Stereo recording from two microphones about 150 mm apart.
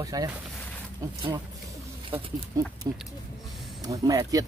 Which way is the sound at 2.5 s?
20° right (ahead or behind).